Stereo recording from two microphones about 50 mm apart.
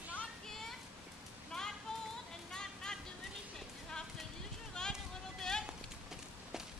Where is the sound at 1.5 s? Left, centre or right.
Centre.